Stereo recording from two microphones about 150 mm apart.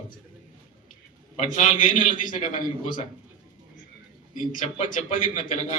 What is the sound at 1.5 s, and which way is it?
A man's voice, 55° left (ahead or behind).